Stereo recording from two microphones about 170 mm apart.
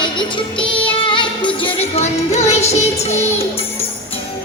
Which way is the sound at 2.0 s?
40° left (ahead or behind).